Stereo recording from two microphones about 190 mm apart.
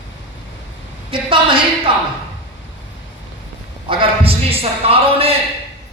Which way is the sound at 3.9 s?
30° right (ahead or behind).